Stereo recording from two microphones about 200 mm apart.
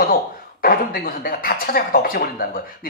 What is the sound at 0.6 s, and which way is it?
Speech, 45° left (ahead or behind).